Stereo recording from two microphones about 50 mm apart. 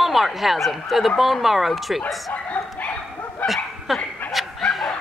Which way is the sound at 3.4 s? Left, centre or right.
Centre.